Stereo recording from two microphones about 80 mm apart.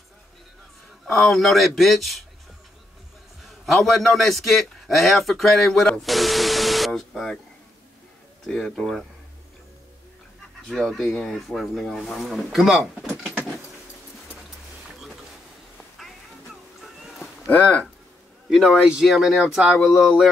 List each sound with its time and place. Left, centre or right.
1.0 s speech: centre
3.4 s a man's voice: centre
8.5 s speech: centre
10.7 s speech: centre
17.5 s speech: centre
18.9 s speech: centre